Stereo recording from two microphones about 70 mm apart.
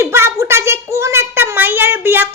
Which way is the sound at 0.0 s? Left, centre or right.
Right.